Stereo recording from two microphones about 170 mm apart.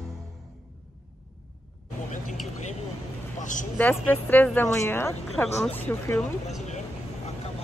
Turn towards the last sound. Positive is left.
turn(degrees=5)  # may be behind; listen again after turning